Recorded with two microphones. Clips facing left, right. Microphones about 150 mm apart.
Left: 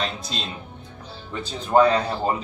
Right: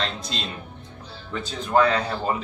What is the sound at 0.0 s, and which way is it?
Speech, 10° left (ahead or behind).